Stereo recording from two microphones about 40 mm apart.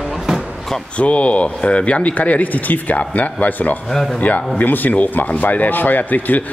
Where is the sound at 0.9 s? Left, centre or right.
Left.